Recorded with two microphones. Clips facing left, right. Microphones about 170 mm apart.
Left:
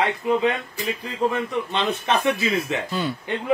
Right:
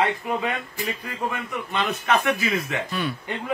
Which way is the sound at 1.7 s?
30° left (ahead or behind).